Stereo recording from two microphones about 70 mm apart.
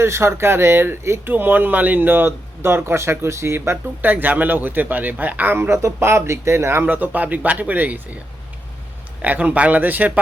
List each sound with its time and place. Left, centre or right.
0.0 s speech: right
4.0 s a man's voice: right
9.2 s a man's voice: right